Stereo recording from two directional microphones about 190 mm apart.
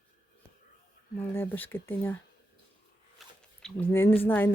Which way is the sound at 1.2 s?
10° left (ahead or behind).